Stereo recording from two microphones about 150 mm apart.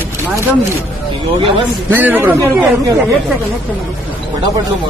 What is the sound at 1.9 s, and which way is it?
Speech, 10° right (ahead or behind).